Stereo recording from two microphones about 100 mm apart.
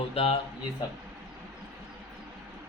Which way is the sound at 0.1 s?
75° left (ahead or behind).